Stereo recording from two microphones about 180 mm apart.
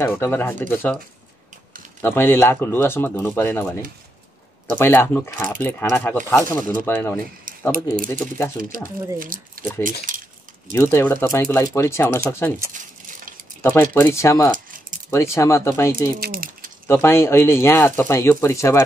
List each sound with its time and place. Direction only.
0.0 s speech: 10° left (ahead or behind)
2.0 s speech: 15° left (ahead or behind)
4.7 s speech: 10° left (ahead or behind)
7.7 s speech: 50° right (ahead or behind)
9.6 s speech: 10° left (ahead or behind)
12.7 s a sound: 50° right (ahead or behind)
13.6 s speech: 20° left (ahead or behind)
16.2 s speech: 55° right (ahead or behind)
16.8 s speech: 15° left (ahead or behind)